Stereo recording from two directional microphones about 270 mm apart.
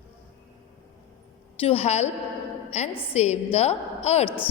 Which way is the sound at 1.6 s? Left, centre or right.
Left.